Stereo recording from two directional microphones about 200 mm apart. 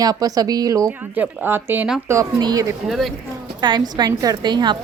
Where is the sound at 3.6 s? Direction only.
20° right (ahead or behind).